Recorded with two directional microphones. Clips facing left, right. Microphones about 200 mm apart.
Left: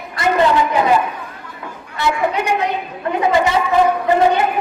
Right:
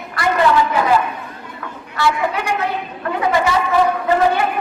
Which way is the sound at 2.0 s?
20° left (ahead or behind).